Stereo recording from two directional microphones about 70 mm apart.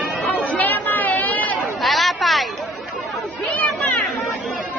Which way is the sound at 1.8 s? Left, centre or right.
Centre.